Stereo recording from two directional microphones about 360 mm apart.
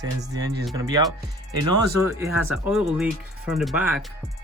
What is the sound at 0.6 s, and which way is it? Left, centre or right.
Speech, centre.